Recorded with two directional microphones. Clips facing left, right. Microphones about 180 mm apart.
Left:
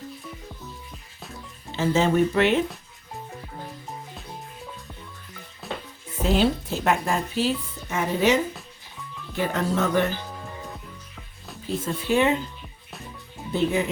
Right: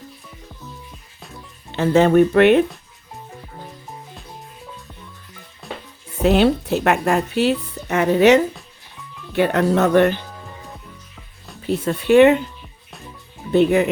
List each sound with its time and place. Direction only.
1.7 s speech: 60° right (ahead or behind)
5.6 s music: centre (ahead or behind)
6.2 s speech: 65° right (ahead or behind)
11.6 s speech: 70° right (ahead or behind)
13.5 s speech: 65° right (ahead or behind)